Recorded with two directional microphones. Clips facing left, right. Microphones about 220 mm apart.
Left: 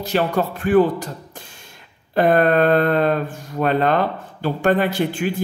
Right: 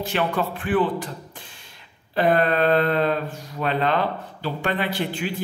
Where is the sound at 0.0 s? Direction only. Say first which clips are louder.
Left 4 dB; 40° left (ahead or behind).